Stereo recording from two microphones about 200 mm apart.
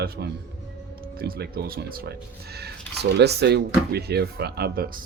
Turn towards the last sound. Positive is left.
turn(degrees=-50)  # may be behind; listen again after turning